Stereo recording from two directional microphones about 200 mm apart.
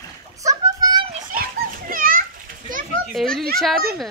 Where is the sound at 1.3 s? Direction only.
45° right (ahead or behind).